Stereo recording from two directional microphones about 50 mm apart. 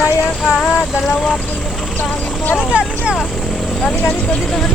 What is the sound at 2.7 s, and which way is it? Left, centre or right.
Speech, right.